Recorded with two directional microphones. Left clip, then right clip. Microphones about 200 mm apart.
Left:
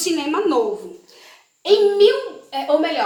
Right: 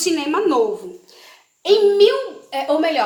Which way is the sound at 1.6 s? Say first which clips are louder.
Right 1 dB; 55° right (ahead or behind).